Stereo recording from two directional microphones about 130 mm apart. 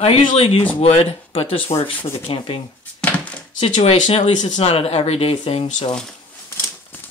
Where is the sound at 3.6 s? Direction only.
50° left (ahead or behind).